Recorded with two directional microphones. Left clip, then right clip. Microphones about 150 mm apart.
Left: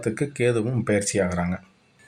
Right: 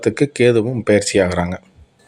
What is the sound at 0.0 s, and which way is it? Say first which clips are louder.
Speech: right 9 dB; 40° right (ahead or behind).